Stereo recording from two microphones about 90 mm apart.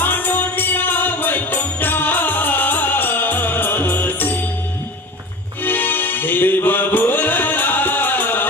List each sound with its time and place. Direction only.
0.0 s music: 20° left (ahead or behind)
5.6 s music: 20° left (ahead or behind)